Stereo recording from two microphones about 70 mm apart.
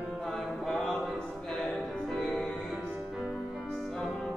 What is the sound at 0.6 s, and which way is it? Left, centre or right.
Music, centre.